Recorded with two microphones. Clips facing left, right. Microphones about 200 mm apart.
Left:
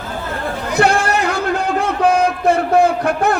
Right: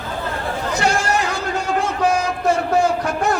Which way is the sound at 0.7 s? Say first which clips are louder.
Left 5 dB; 55° left (ahead or behind).